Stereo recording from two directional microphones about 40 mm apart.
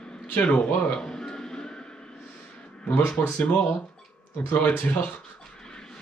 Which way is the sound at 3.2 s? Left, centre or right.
Left.